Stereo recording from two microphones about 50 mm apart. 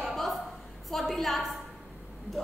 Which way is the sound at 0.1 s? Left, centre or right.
Centre.